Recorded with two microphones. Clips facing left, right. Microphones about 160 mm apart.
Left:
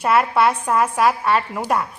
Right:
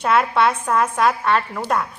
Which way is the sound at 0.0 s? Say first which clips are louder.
Left 1 dB; 5° left (ahead or behind).